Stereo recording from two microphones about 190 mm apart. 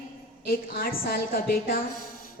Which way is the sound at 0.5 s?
50° left (ahead or behind).